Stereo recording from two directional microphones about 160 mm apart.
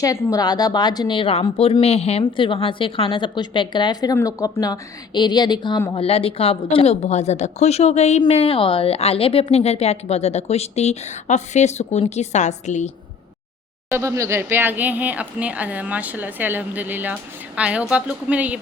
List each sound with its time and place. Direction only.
0.0 s a woman's voice: 20° left (ahead or behind)
5.9 s a woman's voice: 35° left (ahead or behind)
13.9 s a woman's voice: 20° right (ahead or behind)